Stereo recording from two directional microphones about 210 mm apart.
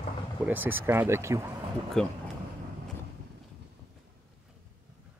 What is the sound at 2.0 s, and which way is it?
Speech, centre (ahead or behind).